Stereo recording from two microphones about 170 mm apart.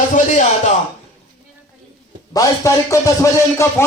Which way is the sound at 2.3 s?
20° left (ahead or behind).